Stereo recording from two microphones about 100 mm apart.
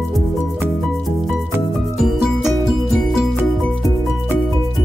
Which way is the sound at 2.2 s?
5° right (ahead or behind).